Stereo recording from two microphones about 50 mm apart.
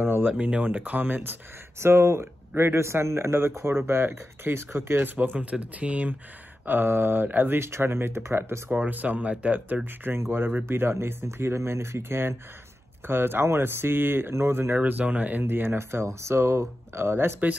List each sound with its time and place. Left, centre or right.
0.0 s a sound: right
0.3 s speech: right
5.4 s speech: right
6.6 s speech: right
8.8 s speech: right
10.1 s speech: right
14.3 s speech: right
14.8 s speech: right
15.4 s speech: right
16.1 s speech: right